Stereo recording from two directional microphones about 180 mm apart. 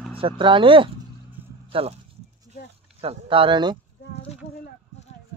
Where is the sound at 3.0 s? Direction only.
30° right (ahead or behind).